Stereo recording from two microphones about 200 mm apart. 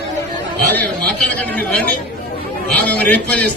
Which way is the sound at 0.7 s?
10° left (ahead or behind).